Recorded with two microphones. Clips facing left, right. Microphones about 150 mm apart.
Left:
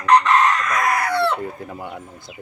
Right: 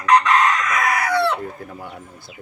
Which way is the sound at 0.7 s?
Centre (ahead or behind).